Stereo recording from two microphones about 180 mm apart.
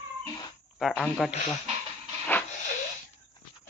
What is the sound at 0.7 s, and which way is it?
Speech, centre (ahead or behind).